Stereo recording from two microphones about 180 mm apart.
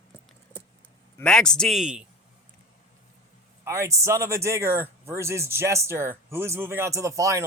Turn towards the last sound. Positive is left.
turn(degrees=-15)  # may be behind; listen again after turning